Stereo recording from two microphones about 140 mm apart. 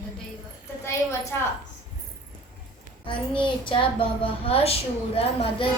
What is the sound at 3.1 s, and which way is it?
A woman's voice, 35° left (ahead or behind).